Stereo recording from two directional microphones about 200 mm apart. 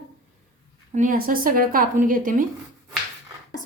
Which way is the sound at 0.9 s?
40° right (ahead or behind).